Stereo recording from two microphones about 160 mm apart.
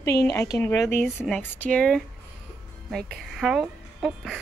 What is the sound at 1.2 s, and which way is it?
A woman's voice, 5° left (ahead or behind).